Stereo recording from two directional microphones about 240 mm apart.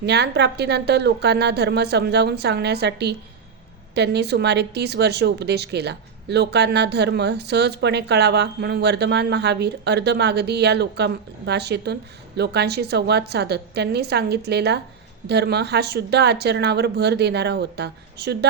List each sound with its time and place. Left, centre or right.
0.0 s speech: right